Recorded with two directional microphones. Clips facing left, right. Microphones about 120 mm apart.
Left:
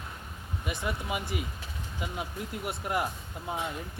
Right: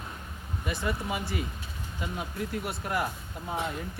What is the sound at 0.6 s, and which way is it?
Speech, 15° left (ahead or behind).